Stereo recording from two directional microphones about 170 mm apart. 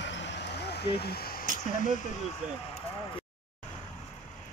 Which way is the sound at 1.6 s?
50° left (ahead or behind).